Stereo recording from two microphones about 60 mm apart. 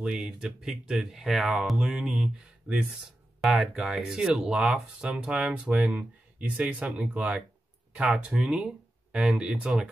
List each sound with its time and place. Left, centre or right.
0.0 s speech: centre
3.4 s speech: centre